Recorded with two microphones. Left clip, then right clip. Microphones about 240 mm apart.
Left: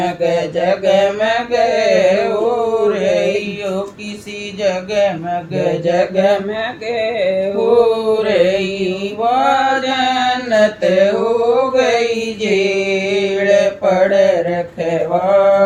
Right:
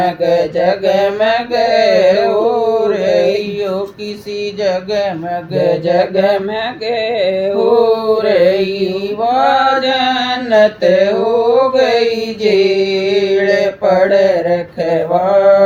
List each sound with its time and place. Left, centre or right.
0.0 s mantra: right
4.6 s speech: right
5.5 s mantra: right